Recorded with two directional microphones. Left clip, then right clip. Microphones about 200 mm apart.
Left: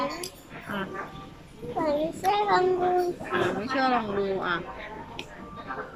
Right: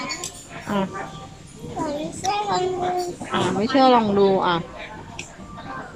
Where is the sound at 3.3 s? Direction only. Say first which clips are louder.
Right 5 dB; 25° right (ahead or behind).